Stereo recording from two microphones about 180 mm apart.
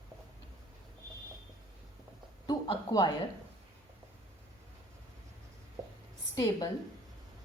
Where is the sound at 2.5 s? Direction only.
20° left (ahead or behind).